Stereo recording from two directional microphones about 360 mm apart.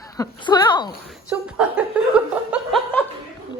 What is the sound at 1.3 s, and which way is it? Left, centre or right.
Chuckle, centre.